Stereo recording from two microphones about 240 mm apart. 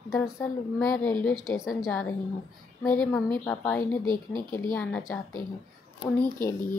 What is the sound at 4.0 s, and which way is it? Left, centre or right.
Speech, centre.